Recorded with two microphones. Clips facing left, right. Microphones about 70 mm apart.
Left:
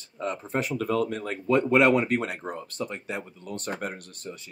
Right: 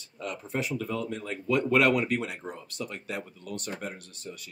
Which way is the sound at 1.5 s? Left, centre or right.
Left.